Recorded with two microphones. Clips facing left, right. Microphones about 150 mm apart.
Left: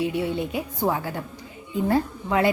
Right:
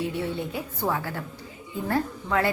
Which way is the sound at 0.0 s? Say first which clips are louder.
Left 4 dB; 15° left (ahead or behind).